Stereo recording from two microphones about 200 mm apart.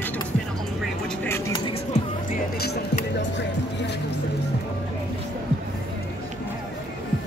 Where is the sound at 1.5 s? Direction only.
25° left (ahead or behind).